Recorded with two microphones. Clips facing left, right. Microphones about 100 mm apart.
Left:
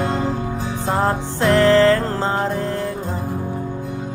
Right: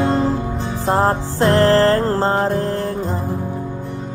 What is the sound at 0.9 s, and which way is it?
Music, 35° right (ahead or behind).